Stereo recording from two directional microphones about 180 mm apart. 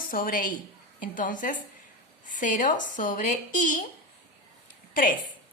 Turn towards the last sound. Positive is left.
turn(degrees=50)  # may be behind; listen again after turning